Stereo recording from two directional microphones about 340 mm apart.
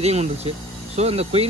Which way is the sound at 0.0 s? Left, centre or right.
Centre.